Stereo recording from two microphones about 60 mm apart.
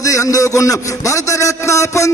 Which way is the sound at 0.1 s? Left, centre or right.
Left.